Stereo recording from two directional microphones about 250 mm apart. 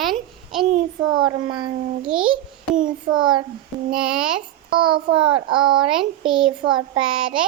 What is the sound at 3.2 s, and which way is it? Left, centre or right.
Speech, centre.